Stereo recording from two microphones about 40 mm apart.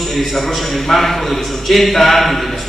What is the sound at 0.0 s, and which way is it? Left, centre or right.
A man's voice, centre.